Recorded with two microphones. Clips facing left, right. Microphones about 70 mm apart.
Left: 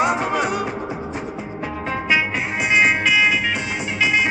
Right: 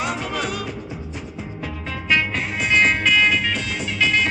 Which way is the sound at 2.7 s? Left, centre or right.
Centre.